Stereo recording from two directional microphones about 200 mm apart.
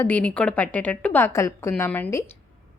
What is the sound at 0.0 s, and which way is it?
A woman's voice, 5° left (ahead or behind).